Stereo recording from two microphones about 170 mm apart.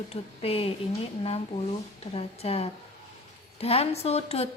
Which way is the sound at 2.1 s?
35° left (ahead or behind).